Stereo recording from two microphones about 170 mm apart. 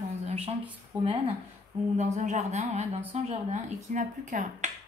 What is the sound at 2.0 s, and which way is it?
Speech, 45° right (ahead or behind).